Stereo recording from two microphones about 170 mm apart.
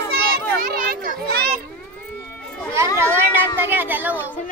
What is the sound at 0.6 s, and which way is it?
Children playing, 55° right (ahead or behind).